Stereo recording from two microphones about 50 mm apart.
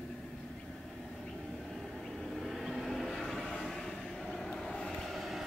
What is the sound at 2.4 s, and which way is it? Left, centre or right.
Train, centre.